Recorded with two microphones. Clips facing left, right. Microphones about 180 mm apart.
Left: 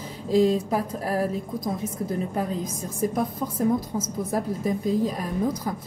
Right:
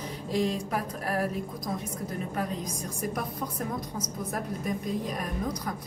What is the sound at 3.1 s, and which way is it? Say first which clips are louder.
A woman's voice: left 6 dB; 25° left (ahead or behind).